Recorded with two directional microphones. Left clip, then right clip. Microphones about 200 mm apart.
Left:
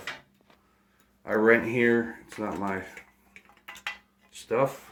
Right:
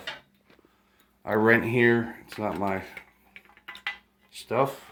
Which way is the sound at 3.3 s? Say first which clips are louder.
Right 2 dB; 10° left (ahead or behind).